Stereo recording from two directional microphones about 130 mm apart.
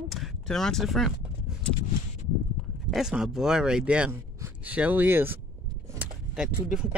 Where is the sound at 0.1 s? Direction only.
Centre (ahead or behind).